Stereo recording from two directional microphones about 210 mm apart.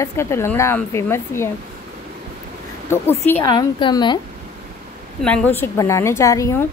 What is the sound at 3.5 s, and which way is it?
Speech, 20° left (ahead or behind).